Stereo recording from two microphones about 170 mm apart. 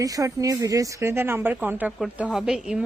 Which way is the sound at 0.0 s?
20° right (ahead or behind).